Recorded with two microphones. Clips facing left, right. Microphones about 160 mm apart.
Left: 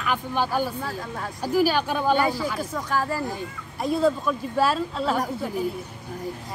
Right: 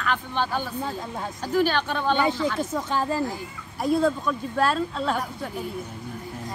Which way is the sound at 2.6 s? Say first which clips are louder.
Right 1 dB; 25° right (ahead or behind).